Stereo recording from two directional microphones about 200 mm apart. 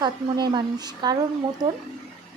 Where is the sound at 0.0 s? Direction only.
20° right (ahead or behind).